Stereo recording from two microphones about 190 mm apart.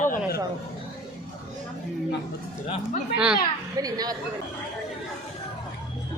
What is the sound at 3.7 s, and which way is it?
Speech, 20° right (ahead or behind).